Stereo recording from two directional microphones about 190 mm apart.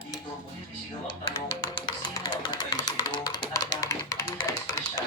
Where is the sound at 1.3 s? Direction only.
25° left (ahead or behind).